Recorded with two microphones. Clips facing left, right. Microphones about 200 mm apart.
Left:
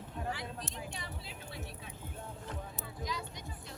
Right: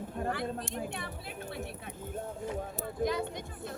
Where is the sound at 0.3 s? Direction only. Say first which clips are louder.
Right 6 dB; 55° right (ahead or behind).